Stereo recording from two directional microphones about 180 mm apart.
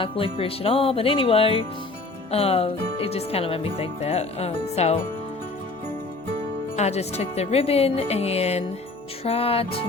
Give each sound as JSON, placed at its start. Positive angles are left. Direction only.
{"t": 0.0, "sound": "speech", "side_deg": 30}
{"t": 6.7, "sound": "speech", "side_deg": 35}